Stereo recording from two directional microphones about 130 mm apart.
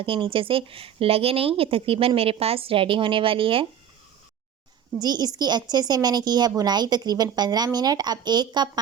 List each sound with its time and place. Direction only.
0.0 s a woman's voice: 45° right (ahead or behind)
4.9 s a woman's voice: 30° right (ahead or behind)